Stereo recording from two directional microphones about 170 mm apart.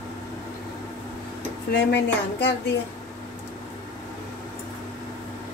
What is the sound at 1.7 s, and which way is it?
Speech, 90° left.